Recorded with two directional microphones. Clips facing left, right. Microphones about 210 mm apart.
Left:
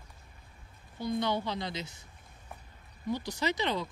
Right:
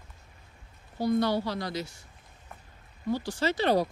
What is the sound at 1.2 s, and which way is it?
Speech, 20° left (ahead or behind).